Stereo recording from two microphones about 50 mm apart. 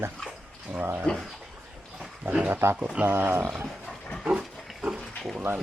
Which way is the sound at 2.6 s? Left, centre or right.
Right.